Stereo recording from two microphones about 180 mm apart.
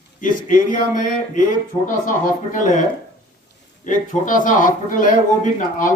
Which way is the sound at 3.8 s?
45° left (ahead or behind).